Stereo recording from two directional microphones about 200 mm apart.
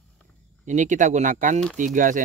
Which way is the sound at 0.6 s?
40° right (ahead or behind).